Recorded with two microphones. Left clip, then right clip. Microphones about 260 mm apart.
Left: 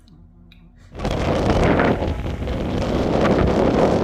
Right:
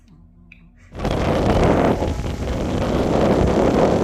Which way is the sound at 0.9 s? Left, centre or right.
Centre.